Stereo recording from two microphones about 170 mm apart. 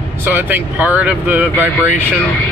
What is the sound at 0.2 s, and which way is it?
Speech, 10° right (ahead or behind).